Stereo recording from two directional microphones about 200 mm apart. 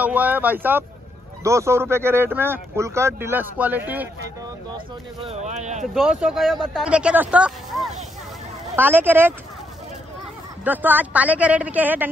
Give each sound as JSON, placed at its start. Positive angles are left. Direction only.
{"t": 0.0, "sound": "speech", "side_deg": -10}
{"t": 4.7, "sound": "speech", "side_deg": -30}
{"t": 5.9, "sound": "speech", "side_deg": 0}
{"t": 10.6, "sound": "speech", "side_deg": -10}